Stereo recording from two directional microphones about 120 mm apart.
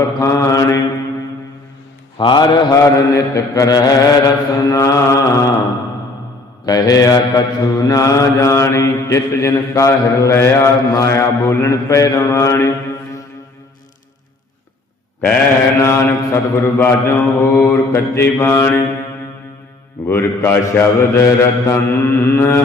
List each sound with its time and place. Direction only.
0.2 s mantra: 25° left (ahead or behind)
2.1 s mantra: 40° left (ahead or behind)
6.7 s mantra: 30° left (ahead or behind)
15.8 s mantra: 25° left (ahead or behind)
20.1 s mantra: 20° left (ahead or behind)